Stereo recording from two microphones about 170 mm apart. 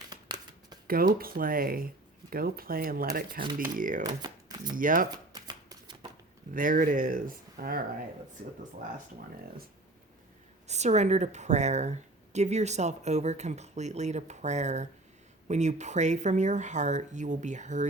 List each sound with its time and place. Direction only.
0.1 s shuffling cards: 25° right (ahead or behind)
0.9 s speech: 60° right (ahead or behind)
4.0 s speech: 25° right (ahead or behind)
4.8 s speech: 55° right (ahead or behind)
5.3 s shuffling cards: 25° right (ahead or behind)
6.5 s speech: 50° right (ahead or behind)
10.7 s a woman's voice: 40° right (ahead or behind)